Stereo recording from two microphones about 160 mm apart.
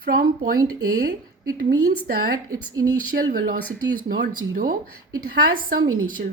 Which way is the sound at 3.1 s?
90° right.